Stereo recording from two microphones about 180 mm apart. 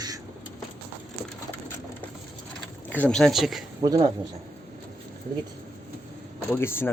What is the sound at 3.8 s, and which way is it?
Speech, 25° right (ahead or behind).